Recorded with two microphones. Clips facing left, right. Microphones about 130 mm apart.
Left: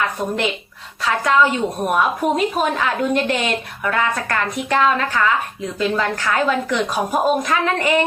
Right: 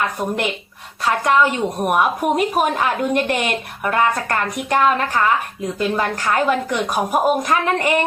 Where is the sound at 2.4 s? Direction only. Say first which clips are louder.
Right 1 dB; 50° right (ahead or behind).